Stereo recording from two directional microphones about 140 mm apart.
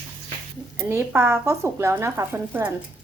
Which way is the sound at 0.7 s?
20° right (ahead or behind).